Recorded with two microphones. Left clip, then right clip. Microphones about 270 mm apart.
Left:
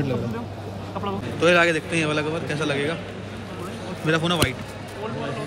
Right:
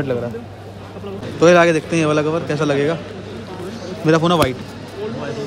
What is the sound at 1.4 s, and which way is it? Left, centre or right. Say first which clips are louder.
A man's voice: right 6 dB; right.